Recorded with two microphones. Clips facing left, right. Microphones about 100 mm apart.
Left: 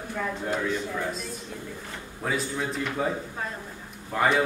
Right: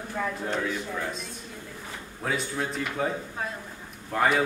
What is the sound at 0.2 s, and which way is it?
A man's voice, 5° right (ahead or behind).